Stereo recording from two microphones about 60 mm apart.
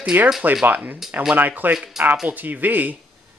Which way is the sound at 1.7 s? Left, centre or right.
Centre.